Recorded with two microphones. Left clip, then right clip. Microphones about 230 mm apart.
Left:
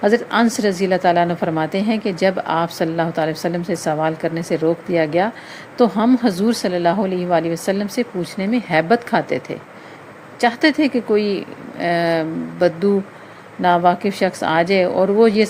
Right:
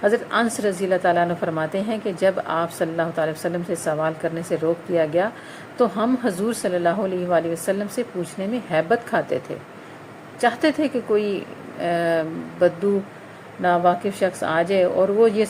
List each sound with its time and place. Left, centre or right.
0.0 s a woman's voice: left
10.4 s a woman's voice: left